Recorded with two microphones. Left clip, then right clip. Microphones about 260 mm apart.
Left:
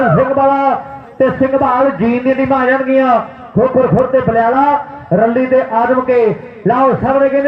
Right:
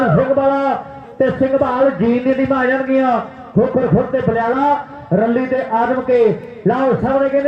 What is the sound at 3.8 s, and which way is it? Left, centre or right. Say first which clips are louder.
A man's voice: left 5 dB; left.